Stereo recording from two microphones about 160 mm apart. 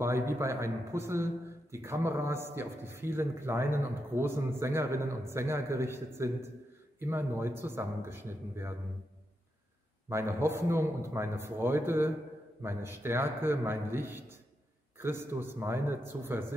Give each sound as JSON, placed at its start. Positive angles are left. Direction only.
{"t": 0.0, "sound": "a man's voice", "side_deg": -15}
{"t": 10.0, "sound": "a man's voice", "side_deg": -15}